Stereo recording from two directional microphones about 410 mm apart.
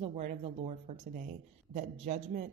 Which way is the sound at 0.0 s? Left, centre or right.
Centre.